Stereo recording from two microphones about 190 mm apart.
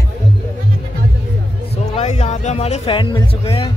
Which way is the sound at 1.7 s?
35° left (ahead or behind).